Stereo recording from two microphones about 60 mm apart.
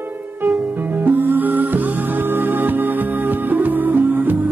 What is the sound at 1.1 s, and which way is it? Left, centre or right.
Music, right.